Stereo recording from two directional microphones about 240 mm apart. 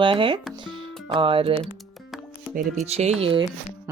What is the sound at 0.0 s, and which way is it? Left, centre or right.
Speech, right.